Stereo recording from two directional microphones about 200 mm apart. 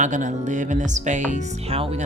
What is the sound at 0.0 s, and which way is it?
Speech, 40° right (ahead or behind).